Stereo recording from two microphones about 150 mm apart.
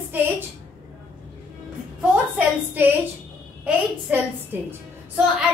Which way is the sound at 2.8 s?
15° right (ahead or behind).